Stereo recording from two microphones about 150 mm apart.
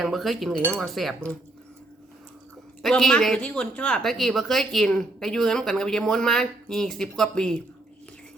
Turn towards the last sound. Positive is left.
turn(degrees=5)  # may be behind; listen again after turning